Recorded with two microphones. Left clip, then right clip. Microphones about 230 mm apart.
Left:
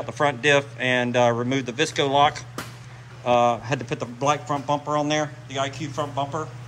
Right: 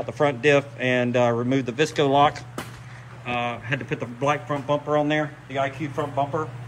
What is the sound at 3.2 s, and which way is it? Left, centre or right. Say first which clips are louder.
Speech: left 8 dB; centre.